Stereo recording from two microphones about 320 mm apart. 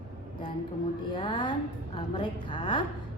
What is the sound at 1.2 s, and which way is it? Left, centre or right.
A woman's voice, centre.